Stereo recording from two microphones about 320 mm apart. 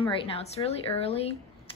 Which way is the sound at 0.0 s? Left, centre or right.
Centre.